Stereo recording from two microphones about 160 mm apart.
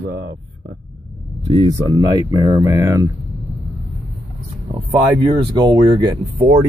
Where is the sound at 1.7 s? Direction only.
25° right (ahead or behind).